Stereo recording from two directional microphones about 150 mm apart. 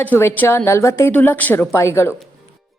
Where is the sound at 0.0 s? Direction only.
15° left (ahead or behind).